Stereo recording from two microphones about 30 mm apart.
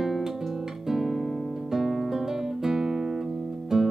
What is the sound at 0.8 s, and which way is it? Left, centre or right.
Music, centre.